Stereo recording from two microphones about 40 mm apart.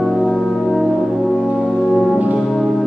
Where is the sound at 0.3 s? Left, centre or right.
Centre.